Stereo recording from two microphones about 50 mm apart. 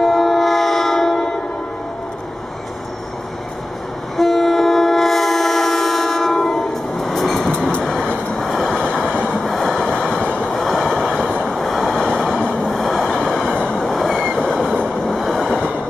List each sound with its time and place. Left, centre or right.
0.0 s train: centre
4.2 s train: centre
7.8 s vehicle: centre
8.5 s train: centre
8.8 s train: centre
9.5 s train: centre
10.2 s train: left
10.5 s train: centre
11.6 s vehicle: centre
13.6 s train: centre
13.9 s train: centre